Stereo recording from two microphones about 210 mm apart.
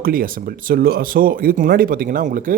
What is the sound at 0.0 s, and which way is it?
Speech, 45° right (ahead or behind).